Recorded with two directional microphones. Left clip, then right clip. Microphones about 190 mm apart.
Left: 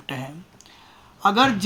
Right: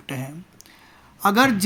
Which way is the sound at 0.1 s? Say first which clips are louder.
Right 1 dB; 25° right (ahead or behind).